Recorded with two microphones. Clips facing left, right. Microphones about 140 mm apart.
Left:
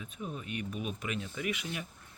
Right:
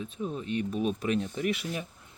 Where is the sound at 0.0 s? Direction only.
30° right (ahead or behind).